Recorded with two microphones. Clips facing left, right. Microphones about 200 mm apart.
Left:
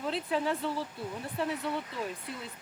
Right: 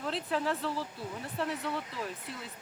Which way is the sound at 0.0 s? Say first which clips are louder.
Left 2 dB; centre (ahead or behind).